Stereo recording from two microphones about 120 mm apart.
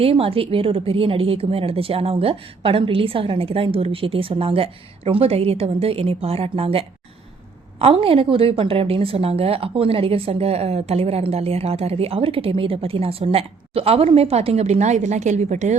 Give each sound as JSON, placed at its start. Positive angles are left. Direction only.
{"t": 0.0, "sound": "a woman's voice", "side_deg": -50}